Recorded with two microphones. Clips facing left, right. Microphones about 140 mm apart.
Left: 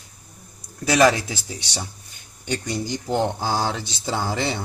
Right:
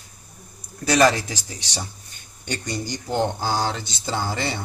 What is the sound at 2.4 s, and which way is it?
Speech, 5° left (ahead or behind).